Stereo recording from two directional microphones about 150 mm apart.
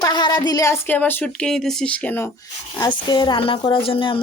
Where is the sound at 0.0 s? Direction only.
30° left (ahead or behind).